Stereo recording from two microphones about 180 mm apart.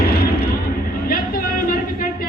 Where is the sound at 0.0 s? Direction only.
60° left (ahead or behind).